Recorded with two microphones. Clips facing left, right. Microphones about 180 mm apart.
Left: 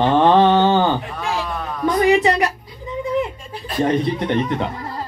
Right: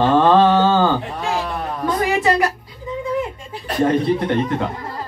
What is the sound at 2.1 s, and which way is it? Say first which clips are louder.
Speech: left 3 dB; 20° left (ahead or behind).